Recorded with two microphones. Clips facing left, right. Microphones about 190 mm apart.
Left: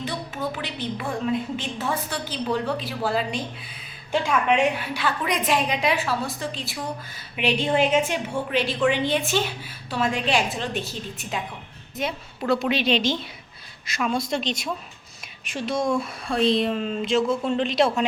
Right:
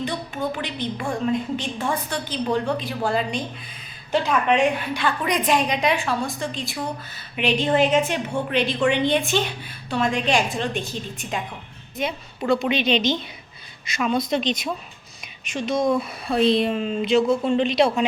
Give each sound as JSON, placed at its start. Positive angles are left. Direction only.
{"t": 0.5, "sound": "a woman's voice", "side_deg": 5}
{"t": 12.5, "sound": "a woman's voice", "side_deg": 0}
{"t": 15.5, "sound": "a woman's voice", "side_deg": 0}